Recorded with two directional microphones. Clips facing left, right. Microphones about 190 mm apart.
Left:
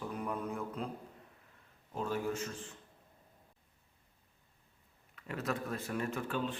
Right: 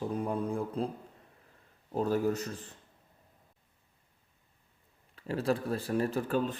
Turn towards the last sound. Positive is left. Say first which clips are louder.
# right 6 dB
turn(degrees=-40)  # may be behind; listen again after turning